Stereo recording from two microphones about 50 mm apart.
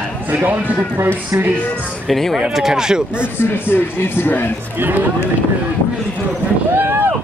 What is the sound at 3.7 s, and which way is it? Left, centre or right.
Speech, left.